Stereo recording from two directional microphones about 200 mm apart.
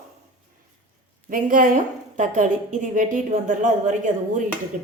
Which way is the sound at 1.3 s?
40° right (ahead or behind).